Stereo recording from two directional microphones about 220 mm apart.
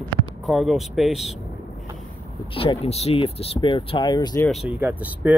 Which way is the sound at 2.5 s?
25° left (ahead or behind).